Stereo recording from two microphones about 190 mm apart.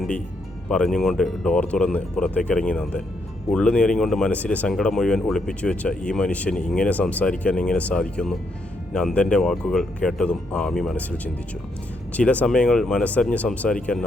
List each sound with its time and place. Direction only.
0.7 s speech: 5° left (ahead or behind)
12.1 s speech: 5° left (ahead or behind)